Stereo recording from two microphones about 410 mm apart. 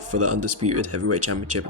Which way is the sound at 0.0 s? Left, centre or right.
Right.